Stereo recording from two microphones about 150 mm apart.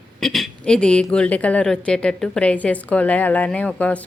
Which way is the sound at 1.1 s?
10° left (ahead or behind).